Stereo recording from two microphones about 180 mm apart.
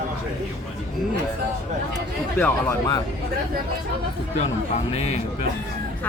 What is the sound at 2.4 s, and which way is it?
Speech, 15° left (ahead or behind).